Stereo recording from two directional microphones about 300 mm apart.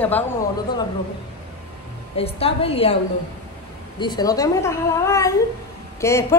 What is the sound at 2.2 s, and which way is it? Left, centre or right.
Speech, centre.